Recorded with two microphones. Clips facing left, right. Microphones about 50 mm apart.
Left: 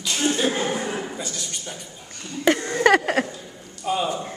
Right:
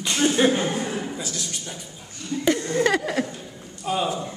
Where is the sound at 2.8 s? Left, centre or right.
Left.